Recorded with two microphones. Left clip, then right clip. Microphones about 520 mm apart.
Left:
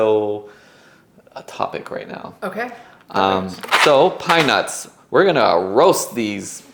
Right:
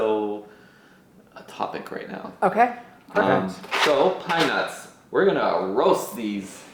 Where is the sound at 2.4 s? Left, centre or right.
Right.